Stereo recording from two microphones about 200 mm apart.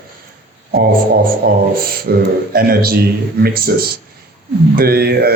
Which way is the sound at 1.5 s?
50° right (ahead or behind).